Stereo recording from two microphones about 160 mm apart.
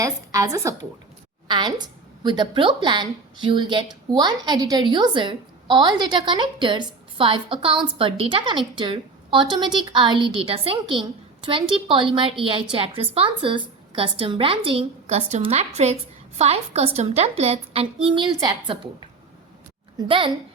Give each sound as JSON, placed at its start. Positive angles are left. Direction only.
{"t": 0.0, "sound": "a woman's voice", "side_deg": -20}